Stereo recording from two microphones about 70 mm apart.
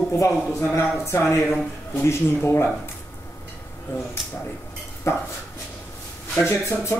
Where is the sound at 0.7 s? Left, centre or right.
Left.